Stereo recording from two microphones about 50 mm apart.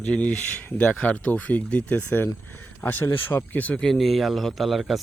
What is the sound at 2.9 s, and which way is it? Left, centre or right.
Speech, left.